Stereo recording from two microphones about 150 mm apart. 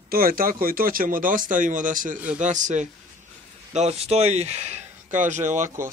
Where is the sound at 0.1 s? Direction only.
75° right (ahead or behind).